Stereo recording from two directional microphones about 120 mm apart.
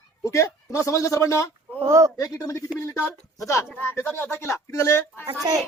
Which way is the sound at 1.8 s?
25° right (ahead or behind).